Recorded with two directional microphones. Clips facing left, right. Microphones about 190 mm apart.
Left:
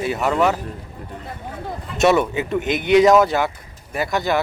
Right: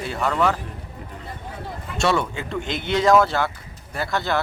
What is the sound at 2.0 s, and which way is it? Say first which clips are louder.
A man's voice: left 6 dB; 20° left (ahead or behind).